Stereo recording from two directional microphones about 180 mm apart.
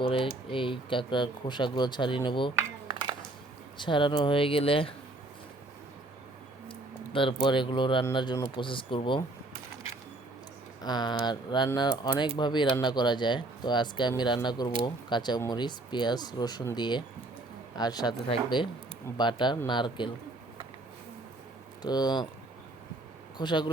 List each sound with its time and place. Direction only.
0.0 s speech: 30° left (ahead or behind)
2.8 s a sound: 25° right (ahead or behind)
3.8 s speech: 25° left (ahead or behind)
6.7 s a sound: 30° left (ahead or behind)
7.4 s speech: 25° left (ahead or behind)
10.8 s speech: 25° left (ahead or behind)
21.8 s speech: 25° left (ahead or behind)
23.4 s speech: 25° left (ahead or behind)